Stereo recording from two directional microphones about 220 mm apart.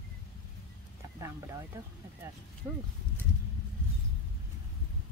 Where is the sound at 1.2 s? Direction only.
15° right (ahead or behind).